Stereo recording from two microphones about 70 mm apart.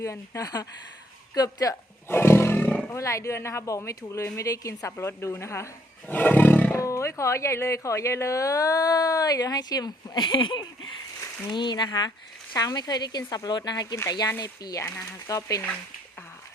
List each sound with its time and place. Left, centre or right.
0.0 s speech: left
2.0 s roar: left
2.6 s roar: left
2.9 s speech: left
6.1 s roar: left
6.7 s speech: left
12.5 s speech: left
13.9 s speech: left